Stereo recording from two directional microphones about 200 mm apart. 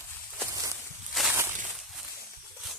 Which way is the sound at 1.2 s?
Centre (ahead or behind).